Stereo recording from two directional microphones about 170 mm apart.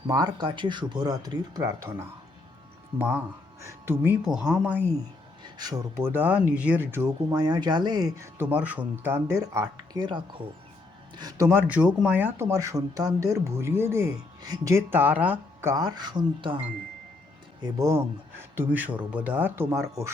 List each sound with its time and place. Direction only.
0.1 s speech: 25° right (ahead or behind)
5.4 s speech: 25° right (ahead or behind)
6.1 s speech: 10° right (ahead or behind)
11.7 s speech: 5° right (ahead or behind)
15.7 s speech: 25° right (ahead or behind)
17.7 s speech: 15° right (ahead or behind)